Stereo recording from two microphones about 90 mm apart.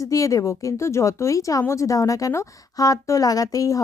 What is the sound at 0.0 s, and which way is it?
Speech, 40° left (ahead or behind).